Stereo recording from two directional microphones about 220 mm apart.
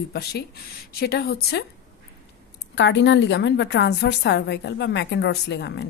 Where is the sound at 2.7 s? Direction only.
55° left (ahead or behind).